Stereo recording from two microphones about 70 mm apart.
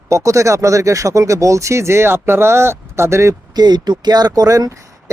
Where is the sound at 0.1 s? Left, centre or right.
Right.